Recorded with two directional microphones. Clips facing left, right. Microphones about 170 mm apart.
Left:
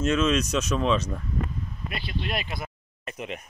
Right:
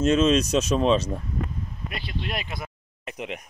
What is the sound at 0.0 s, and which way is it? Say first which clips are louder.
Speech: right 4 dB; 30° right (ahead or behind).